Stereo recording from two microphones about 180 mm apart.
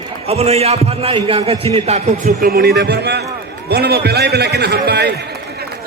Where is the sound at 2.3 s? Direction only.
55° right (ahead or behind).